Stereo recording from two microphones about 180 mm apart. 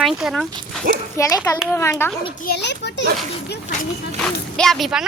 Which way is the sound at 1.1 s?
15° left (ahead or behind).